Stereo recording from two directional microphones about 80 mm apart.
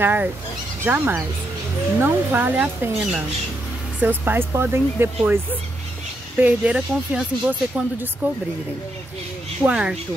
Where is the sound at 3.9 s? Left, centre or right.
Right.